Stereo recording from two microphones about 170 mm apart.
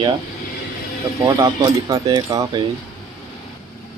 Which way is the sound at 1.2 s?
20° right (ahead or behind).